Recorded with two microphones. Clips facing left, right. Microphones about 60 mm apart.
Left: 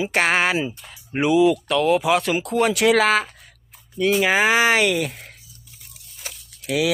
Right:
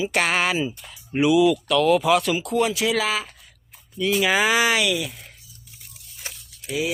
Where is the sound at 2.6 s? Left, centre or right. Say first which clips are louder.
Left 6 dB; left.